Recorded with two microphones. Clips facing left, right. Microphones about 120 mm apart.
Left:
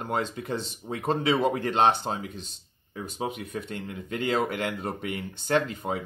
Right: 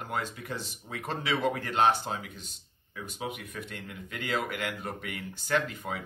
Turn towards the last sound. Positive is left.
turn(degrees=30)  # may be behind; listen again after turning